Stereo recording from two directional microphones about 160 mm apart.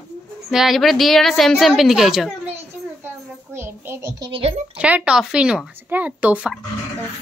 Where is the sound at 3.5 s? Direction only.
15° right (ahead or behind).